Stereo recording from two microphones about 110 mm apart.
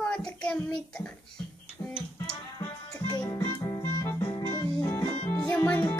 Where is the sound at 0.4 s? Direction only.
5° left (ahead or behind).